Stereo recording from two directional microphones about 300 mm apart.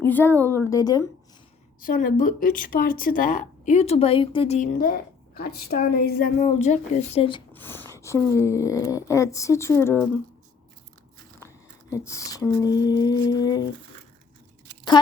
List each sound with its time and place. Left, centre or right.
0.0 s a woman's voice: centre
1.8 s speech: left; by 10.1 s centre
11.3 s a sound: centre